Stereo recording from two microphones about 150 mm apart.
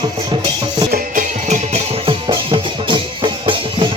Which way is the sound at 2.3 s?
35° right (ahead or behind).